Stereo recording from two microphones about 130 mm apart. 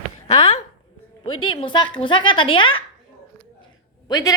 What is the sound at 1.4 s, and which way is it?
A woman's voice, 40° left (ahead or behind).